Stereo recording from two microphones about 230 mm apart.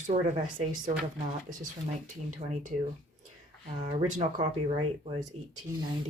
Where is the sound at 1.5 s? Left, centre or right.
Right.